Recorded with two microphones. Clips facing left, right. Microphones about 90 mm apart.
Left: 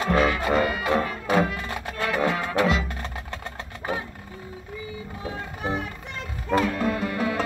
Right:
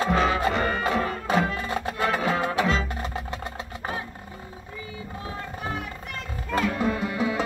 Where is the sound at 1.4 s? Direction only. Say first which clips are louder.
Right 2 dB; 25° right (ahead or behind).